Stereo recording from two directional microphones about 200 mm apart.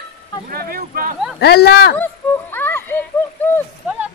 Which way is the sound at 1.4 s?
55° left (ahead or behind).